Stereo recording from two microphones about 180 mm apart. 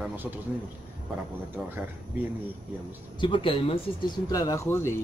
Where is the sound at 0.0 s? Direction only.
10° right (ahead or behind).